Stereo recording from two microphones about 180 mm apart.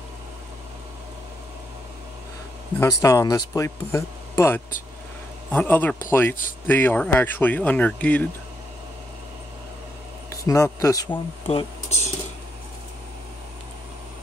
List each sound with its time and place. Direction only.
2.8 s speech: 15° left (ahead or behind)
10.3 s speech: 20° left (ahead or behind)
11.4 s speech: 35° left (ahead or behind)